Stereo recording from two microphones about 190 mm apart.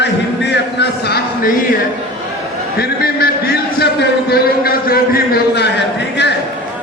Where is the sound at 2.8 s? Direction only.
55° left (ahead or behind).